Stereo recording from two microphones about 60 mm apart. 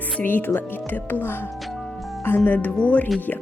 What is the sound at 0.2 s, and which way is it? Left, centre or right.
Speech, left.